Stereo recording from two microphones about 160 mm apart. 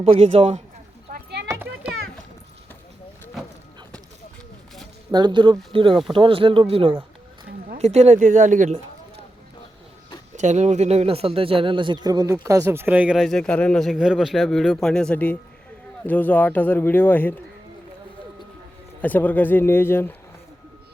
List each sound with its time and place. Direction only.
0.0 s speech: 35° right (ahead or behind)
1.1 s a sound: 90° right
5.1 s speech: 30° right (ahead or behind); by 9.2 s 45° right (ahead or behind)
10.3 s a man's voice: 50° right (ahead or behind); by 17.4 s 10° left (ahead or behind)
19.0 s a man's voice: 10° left (ahead or behind)